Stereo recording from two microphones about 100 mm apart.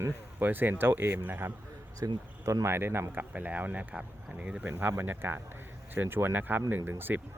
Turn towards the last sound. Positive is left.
turn(degrees=-20)  # may be behind; listen again after turning